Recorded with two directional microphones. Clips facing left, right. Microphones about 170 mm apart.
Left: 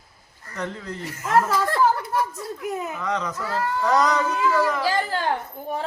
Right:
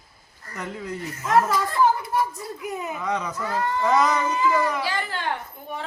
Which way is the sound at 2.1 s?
65° left (ahead or behind).